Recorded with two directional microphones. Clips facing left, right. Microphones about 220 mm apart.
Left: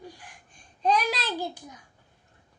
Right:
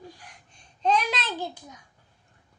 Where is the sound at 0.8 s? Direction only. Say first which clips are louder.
Even; 5° left (ahead or behind).